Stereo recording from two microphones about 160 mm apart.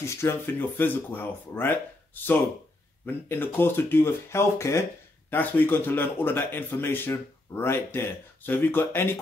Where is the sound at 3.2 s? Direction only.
15° left (ahead or behind).